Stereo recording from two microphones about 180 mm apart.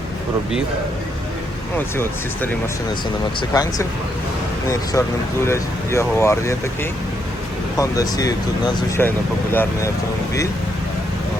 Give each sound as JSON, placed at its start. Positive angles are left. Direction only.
{"t": 3.5, "sound": "speech", "side_deg": 20}
{"t": 7.8, "sound": "speech", "side_deg": 20}